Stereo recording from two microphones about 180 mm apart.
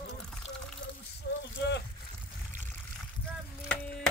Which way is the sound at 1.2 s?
60° left (ahead or behind).